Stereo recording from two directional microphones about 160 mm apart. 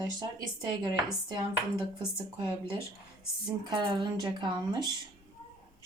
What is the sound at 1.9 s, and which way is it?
Speech, 30° right (ahead or behind).